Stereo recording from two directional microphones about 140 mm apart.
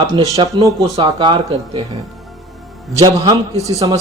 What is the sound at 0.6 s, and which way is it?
Speech, 25° right (ahead or behind).